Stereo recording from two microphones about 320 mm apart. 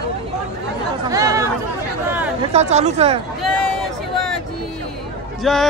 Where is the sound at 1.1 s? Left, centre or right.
Centre.